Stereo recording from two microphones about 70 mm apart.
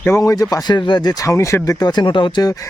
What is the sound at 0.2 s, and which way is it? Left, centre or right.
Speech, left.